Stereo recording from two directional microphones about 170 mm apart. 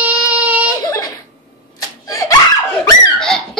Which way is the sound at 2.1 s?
20° left (ahead or behind).